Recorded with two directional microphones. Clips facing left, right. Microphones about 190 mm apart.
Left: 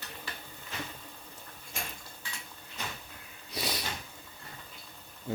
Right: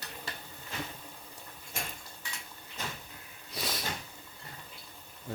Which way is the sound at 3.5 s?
Centre (ahead or behind).